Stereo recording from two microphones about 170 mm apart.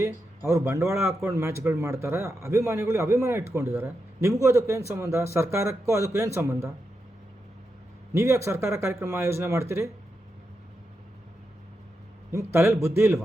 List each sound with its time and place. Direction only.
0.0 s a man's voice: 15° right (ahead or behind)
8.1 s a man's voice: 15° right (ahead or behind)
12.3 s a man's voice: 15° right (ahead or behind)